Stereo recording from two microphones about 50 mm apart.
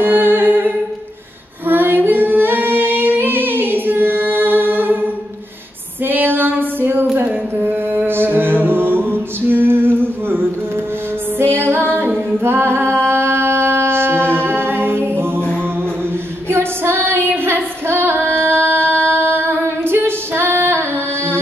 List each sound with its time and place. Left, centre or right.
0.0 s humming: right
1.7 s singing: right
6.0 s female singing: right
7.5 s music: right
11.5 s music: right
15.0 s mantra: right
16.4 s female singing: right